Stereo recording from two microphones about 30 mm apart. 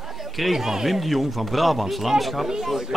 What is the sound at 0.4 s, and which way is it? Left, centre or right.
Speech, centre.